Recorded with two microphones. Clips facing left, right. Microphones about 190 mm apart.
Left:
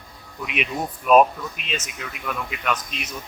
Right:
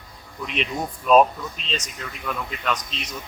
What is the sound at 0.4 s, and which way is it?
Speech, 5° left (ahead or behind).